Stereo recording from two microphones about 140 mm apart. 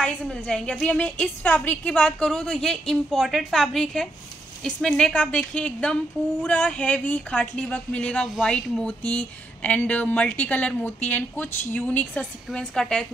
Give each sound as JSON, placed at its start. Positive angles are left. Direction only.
{"t": 0.0, "sound": "a woman's voice", "side_deg": 5}